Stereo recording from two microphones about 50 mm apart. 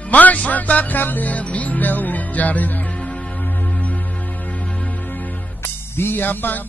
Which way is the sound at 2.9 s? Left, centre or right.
Left.